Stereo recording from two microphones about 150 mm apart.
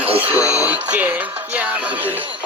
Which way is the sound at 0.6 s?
10° right (ahead or behind).